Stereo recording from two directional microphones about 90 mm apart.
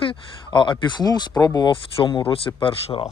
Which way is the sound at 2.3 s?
90° left.